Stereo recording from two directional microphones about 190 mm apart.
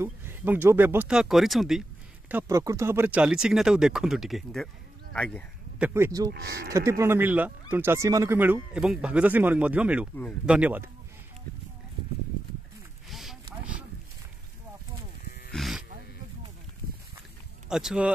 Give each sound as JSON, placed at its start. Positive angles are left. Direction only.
{"t": 0.0, "sound": "speech", "side_deg": -10}
{"t": 5.8, "sound": "speech", "side_deg": -10}
{"t": 6.3, "sound": "speech", "side_deg": -55}
{"t": 6.7, "sound": "speech", "side_deg": -15}
{"t": 13.1, "sound": "a sound", "side_deg": 0}
{"t": 15.5, "sound": "a sound", "side_deg": 0}
{"t": 17.6, "sound": "speech", "side_deg": -5}